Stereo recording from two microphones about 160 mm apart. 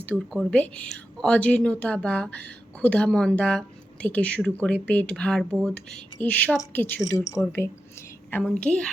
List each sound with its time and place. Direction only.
0.3 s speech: 5° left (ahead or behind)
8.4 s a woman's voice: 5° left (ahead or behind)